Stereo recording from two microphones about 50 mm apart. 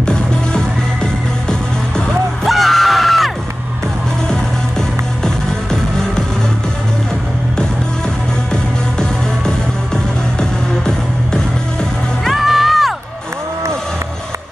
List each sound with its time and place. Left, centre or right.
0.0 s music: centre
2.4 s music: centre
5.2 s music: centre
12.3 s music: centre